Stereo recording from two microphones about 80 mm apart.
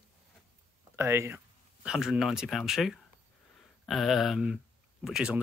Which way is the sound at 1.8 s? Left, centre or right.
Centre.